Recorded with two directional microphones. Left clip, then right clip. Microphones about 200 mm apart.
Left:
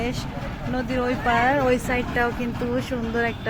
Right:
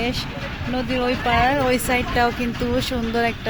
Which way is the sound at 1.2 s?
20° right (ahead or behind).